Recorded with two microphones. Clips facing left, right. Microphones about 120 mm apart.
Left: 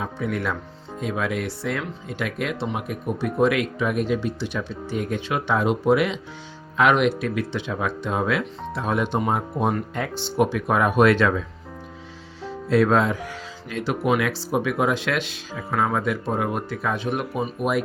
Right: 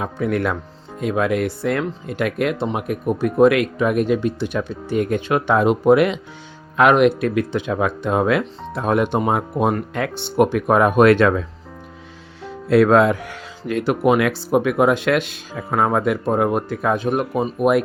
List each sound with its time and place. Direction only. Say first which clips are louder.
0.0 s speech: right 5 dB; 60° right (ahead or behind)